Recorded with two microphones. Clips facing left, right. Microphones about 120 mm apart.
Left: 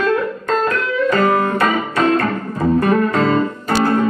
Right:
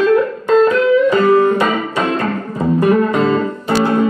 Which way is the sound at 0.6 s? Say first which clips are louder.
Right 7 dB; 20° right (ahead or behind).